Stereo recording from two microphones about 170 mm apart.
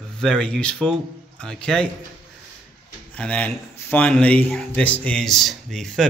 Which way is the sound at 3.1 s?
5° left (ahead or behind).